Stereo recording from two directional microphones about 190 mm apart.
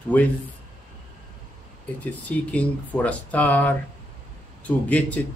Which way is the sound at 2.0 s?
5° left (ahead or behind).